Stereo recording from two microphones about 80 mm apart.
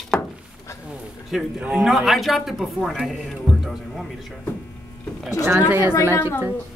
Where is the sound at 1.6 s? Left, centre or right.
Centre.